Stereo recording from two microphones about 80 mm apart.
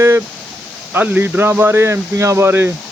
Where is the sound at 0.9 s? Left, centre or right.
Right.